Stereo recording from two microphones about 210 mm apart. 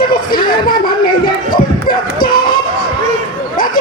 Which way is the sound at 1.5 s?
45° left (ahead or behind).